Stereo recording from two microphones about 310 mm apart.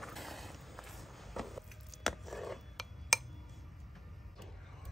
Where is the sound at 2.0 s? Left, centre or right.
Centre.